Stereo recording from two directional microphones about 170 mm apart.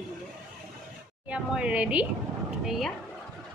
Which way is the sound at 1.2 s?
5° right (ahead or behind).